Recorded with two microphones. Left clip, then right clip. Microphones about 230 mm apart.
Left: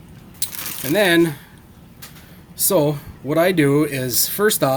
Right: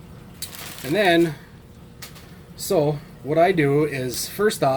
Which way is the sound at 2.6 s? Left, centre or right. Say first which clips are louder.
Left 3 dB; left.